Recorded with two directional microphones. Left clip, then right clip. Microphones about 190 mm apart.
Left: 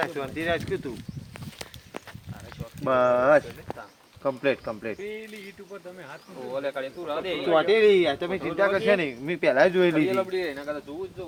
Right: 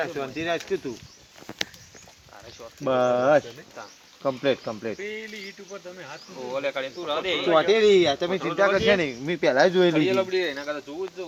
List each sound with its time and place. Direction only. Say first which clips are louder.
0.1 s speech: even; 45° right (ahead or behind)
2.8 s speech: even; 40° right (ahead or behind)
7.5 s speech: right 1 dB; 50° right (ahead or behind)